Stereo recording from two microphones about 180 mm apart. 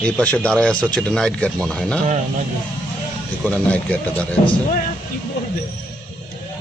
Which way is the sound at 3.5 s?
5° left (ahead or behind).